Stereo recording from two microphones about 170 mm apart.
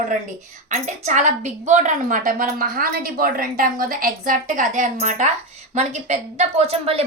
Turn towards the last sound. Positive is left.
turn(degrees=-35)  # may be behind; listen again after turning